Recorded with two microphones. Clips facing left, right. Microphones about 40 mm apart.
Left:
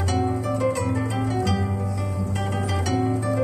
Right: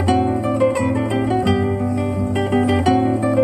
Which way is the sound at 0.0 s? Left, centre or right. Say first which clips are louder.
Right 7 dB; right.